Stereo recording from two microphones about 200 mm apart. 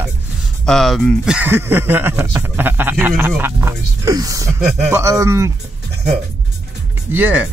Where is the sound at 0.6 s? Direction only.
Centre (ahead or behind).